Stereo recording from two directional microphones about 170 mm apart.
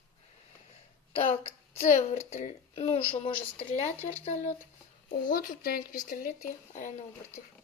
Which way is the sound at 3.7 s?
10° left (ahead or behind).